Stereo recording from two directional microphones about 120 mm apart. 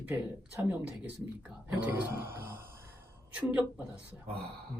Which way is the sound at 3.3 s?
10° right (ahead or behind).